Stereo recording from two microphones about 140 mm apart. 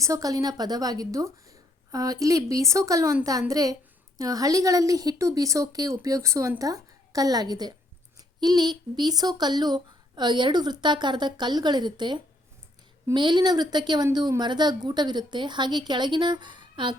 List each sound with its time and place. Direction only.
0.0 s a woman's voice: 25° right (ahead or behind)